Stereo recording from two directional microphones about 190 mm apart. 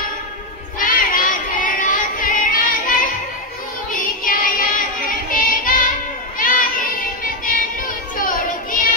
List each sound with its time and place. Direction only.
0.7 s child singing: 45° left (ahead or behind)
3.9 s music: 45° left (ahead or behind)
6.3 s a sound: 45° left (ahead or behind)
7.4 s child singing: 45° left (ahead or behind)